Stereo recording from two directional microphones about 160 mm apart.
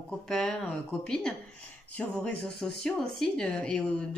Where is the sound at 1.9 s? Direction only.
5° left (ahead or behind).